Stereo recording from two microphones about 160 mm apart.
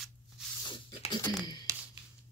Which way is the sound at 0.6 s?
30° left (ahead or behind).